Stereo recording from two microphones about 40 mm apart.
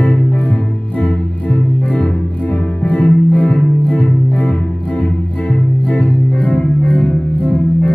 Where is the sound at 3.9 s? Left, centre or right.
Left.